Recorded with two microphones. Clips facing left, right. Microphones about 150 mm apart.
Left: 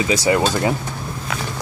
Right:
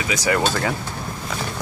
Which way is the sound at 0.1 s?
25° left (ahead or behind).